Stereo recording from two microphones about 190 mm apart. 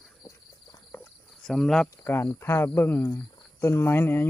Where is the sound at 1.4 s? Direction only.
Centre (ahead or behind).